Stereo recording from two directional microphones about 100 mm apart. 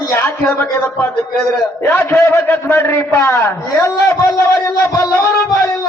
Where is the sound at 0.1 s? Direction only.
25° left (ahead or behind).